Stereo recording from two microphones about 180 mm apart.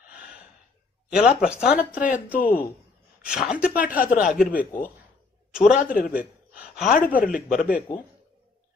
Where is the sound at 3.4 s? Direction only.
5° right (ahead or behind).